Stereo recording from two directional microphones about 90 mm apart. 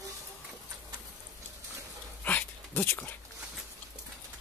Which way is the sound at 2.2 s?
20° left (ahead or behind).